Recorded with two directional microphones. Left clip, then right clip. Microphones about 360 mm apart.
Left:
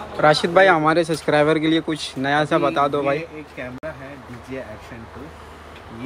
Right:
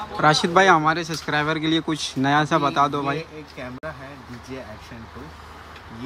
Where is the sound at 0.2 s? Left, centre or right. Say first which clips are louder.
Left 3 dB; centre.